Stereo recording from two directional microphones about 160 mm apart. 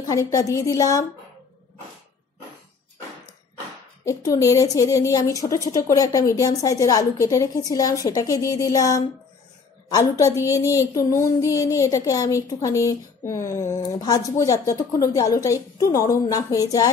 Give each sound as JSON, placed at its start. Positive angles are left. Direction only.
{"t": 0.0, "sound": "speech", "side_deg": 20}
{"t": 4.0, "sound": "speech", "side_deg": 20}